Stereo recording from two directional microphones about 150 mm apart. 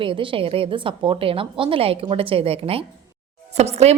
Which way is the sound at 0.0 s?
35° right (ahead or behind).